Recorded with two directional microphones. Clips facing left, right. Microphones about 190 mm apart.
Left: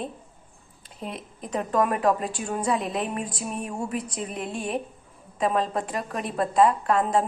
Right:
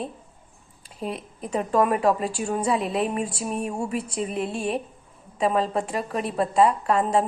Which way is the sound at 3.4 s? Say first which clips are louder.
Right 3 dB; 5° right (ahead or behind).